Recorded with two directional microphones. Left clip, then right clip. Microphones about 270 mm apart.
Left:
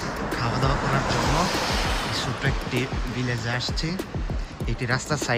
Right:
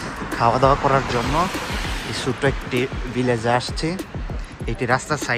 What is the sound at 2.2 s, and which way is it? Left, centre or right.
Speech, centre.